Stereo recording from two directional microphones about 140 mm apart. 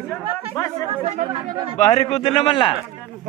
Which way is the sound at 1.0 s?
50° right (ahead or behind).